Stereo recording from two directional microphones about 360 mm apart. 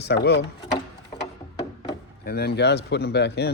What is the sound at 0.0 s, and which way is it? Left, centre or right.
Speech, left.